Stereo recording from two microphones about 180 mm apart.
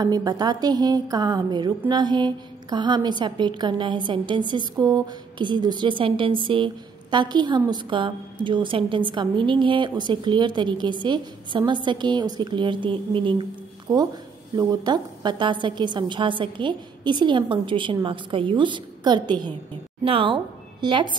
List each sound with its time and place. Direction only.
0.0 s a woman's voice: 20° right (ahead or behind)